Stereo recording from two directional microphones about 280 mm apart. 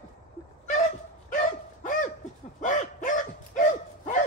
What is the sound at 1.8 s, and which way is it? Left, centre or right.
Laughter, left.